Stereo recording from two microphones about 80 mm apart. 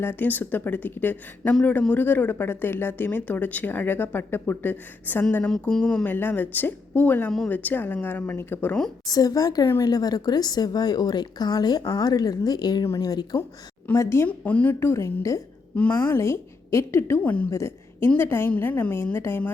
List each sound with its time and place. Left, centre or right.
0.0 s speech: left
5.5 s speech: centre
6.1 s speech: left
7.3 s speech: centre
7.5 s speech: left
9.0 s a woman's voice: left
12.8 s a woman's voice: left
13.9 s a woman's voice: left
14.3 s speech: centre
14.8 s a woman's voice: left
15.7 s speech: centre
16.1 s a woman's voice: left